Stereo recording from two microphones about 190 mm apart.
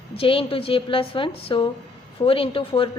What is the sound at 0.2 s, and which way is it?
A woman's voice, 30° left (ahead or behind).